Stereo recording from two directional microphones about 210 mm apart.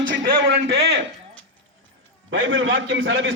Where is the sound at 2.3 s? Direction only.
60° right (ahead or behind).